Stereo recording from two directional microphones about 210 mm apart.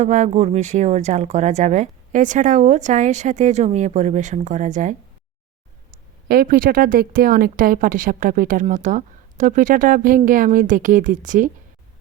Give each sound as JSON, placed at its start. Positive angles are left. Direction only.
{"t": 0.0, "sound": "a woman's voice", "side_deg": -35}
{"t": 6.2, "sound": "a woman's voice", "side_deg": -45}